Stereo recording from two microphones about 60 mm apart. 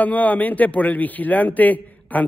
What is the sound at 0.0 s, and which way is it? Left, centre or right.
A man's voice, left.